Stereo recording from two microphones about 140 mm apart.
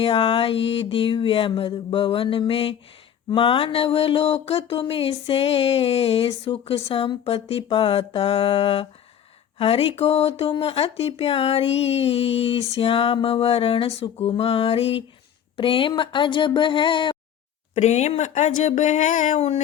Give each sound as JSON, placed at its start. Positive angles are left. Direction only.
{"t": 0.0, "sound": "music", "side_deg": 40}
{"t": 3.2, "sound": "a sound", "side_deg": 40}
{"t": 15.5, "sound": "music", "side_deg": 40}
{"t": 17.7, "sound": "speech", "side_deg": 55}